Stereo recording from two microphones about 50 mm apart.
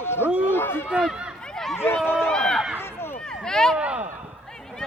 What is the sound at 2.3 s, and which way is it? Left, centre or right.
Speech, centre.